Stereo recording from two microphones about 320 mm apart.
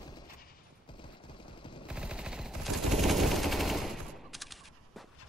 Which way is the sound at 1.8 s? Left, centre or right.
Centre.